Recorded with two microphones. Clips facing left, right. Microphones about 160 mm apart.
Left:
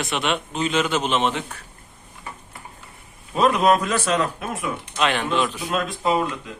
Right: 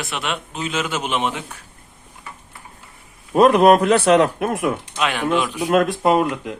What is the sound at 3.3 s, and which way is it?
Speech, 55° right (ahead or behind).